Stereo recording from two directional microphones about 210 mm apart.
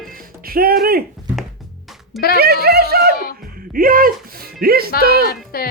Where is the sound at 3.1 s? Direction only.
45° left (ahead or behind).